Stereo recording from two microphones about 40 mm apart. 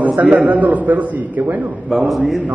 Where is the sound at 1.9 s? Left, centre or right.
Centre.